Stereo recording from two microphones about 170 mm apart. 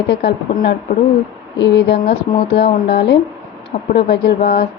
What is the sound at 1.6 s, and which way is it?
Speech, 80° left.